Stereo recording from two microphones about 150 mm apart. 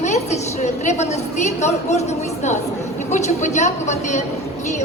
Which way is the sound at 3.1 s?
50° left (ahead or behind).